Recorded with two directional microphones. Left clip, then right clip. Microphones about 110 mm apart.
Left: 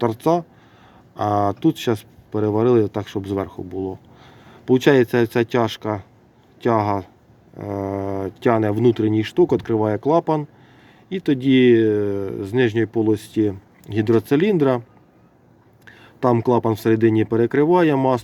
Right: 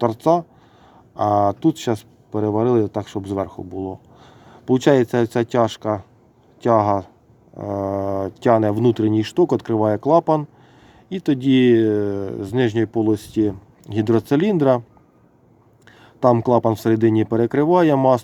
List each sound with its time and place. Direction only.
0.0 s speech: 10° right (ahead or behind)
15.9 s speech: 20° right (ahead or behind)